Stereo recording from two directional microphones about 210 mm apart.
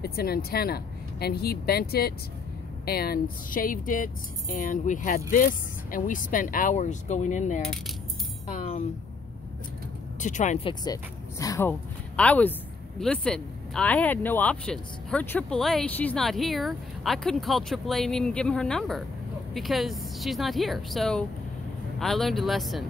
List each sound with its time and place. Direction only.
0.0 s speech: 45° left (ahead or behind)
10.2 s speech: 35° left (ahead or behind)
10.7 s speech: 20° left (ahead or behind); by 22.8 s centre (ahead or behind)